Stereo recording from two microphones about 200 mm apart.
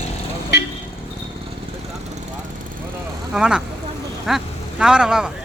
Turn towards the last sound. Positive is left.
turn(degrees=-5)  # may be behind; listen again after turning